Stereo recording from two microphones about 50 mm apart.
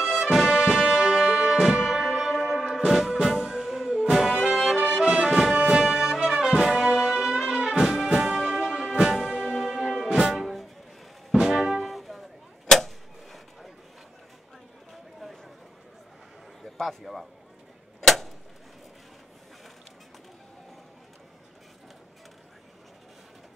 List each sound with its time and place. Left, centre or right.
0.0 s music: centre
10.3 s music: centre
11.8 s arrow: centre
16.7 s a sound: centre